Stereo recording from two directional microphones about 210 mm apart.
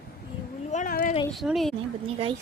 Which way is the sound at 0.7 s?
40° left (ahead or behind).